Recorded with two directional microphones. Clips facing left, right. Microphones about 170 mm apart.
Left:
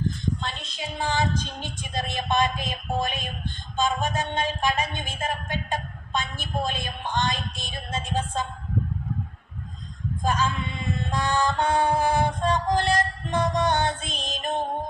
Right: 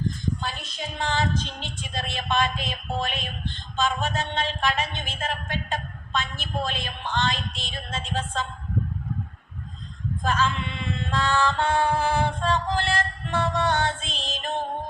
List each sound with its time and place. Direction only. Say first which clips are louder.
0.4 s female singing: right 1 dB; centre (ahead or behind)
1.9 s music: left 2 dB; 15° left (ahead or behind)
10.2 s music: even; 15° left (ahead or behind)